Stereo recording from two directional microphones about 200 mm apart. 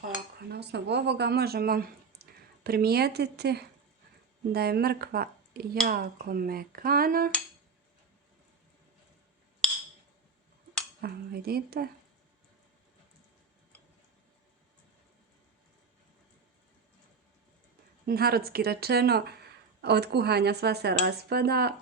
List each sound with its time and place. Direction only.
0.5 s speech: 55° right (ahead or behind)
11.0 s speech: 50° right (ahead or behind)
18.0 s speech: 50° right (ahead or behind)